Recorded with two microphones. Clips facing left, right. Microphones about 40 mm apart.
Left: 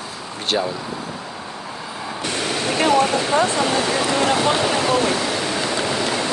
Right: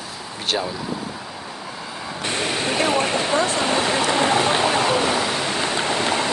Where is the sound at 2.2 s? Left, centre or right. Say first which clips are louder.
Even; right.